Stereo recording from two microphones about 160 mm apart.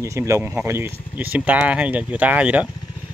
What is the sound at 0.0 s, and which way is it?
Speech, 20° right (ahead or behind).